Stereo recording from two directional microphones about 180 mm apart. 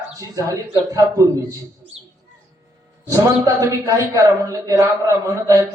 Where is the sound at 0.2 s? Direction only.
20° right (ahead or behind).